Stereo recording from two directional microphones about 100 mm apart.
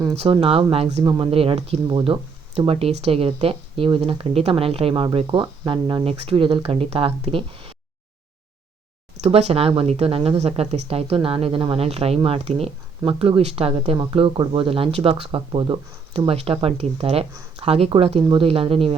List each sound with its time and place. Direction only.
0.2 s speech: 65° right (ahead or behind)
1.0 s speech: 45° right (ahead or behind)
1.3 s speech: 70° right (ahead or behind); by 1.8 s 85° right
1.9 s speech: 50° right (ahead or behind)
2.6 s speech: 70° right (ahead or behind)
3.8 s speech: 50° right (ahead or behind); by 5.0 s 70° right (ahead or behind)
5.1 s speech: 55° right (ahead or behind); by 7.7 s 70° right (ahead or behind)
9.2 s speech: 85° right
13.1 s speech: 65° right (ahead or behind)
13.9 s speech: 55° right (ahead or behind)
16.1 s speech: 80° right